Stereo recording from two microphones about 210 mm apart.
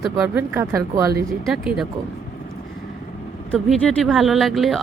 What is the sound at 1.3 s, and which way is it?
Speech, centre (ahead or behind).